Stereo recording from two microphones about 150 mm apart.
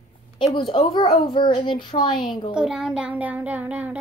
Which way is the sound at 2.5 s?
5° right (ahead or behind).